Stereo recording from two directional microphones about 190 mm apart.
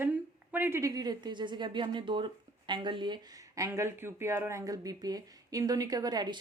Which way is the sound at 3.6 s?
15° right (ahead or behind).